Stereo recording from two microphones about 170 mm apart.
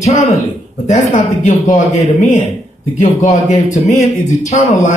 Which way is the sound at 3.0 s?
40° left (ahead or behind).